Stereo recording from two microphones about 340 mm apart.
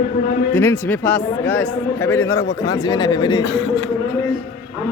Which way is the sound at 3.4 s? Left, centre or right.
Left.